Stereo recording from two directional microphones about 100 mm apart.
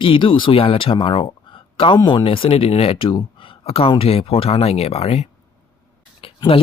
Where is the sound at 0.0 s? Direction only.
55° left (ahead or behind); by 5.3 s 90° left.